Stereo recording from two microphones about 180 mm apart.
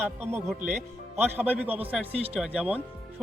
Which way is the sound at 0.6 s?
40° right (ahead or behind).